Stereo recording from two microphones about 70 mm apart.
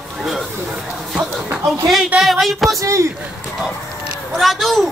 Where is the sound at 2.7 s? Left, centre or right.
Right.